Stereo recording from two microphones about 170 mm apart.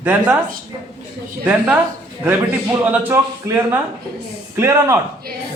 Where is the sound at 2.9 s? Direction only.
15° right (ahead or behind).